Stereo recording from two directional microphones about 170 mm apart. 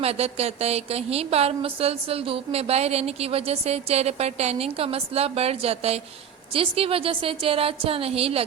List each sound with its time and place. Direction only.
0.0 s a woman's voice: 35° right (ahead or behind)